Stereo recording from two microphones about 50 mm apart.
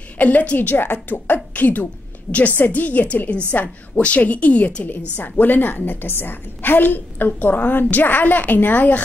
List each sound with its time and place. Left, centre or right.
0.2 s a woman's voice: left
0.6 s a woman's voice: left